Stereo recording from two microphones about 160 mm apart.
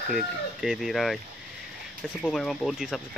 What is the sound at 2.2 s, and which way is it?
Speech, 5° left (ahead or behind).